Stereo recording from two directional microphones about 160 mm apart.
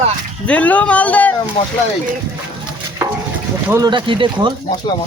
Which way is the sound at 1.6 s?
30° left (ahead or behind).